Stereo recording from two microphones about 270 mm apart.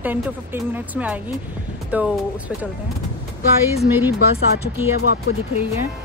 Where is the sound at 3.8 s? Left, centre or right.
Centre.